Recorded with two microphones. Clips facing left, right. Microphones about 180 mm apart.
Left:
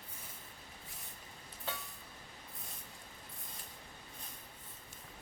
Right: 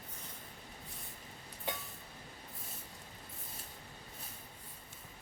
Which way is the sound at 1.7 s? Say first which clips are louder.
Right 3 dB; 15° right (ahead or behind).